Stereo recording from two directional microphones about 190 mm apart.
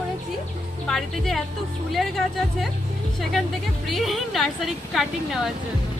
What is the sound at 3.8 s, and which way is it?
A woman's voice, centre (ahead or behind).